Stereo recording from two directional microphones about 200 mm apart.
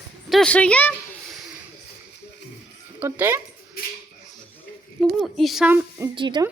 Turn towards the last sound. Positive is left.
turn(degrees=-25)  # may be behind; listen again after turning